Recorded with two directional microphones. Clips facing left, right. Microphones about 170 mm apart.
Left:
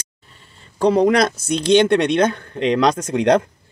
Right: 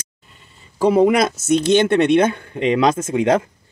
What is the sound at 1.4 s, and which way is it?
Speech, 50° right (ahead or behind).